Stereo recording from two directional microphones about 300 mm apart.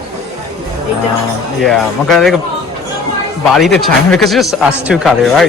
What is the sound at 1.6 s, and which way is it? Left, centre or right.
Speech, centre.